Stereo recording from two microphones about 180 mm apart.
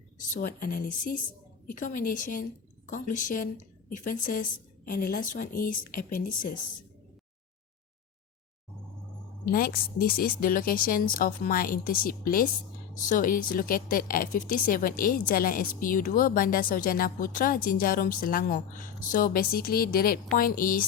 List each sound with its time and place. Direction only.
0.3 s a woman's voice: 50° left (ahead or behind)
9.5 s speech: 55° left (ahead or behind)